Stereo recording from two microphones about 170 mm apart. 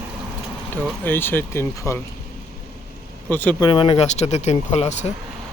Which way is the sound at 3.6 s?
30° left (ahead or behind).